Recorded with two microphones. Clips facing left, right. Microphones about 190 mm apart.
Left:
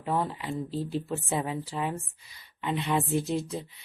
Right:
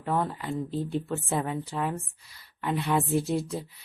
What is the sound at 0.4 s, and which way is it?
A woman's voice, centre (ahead or behind).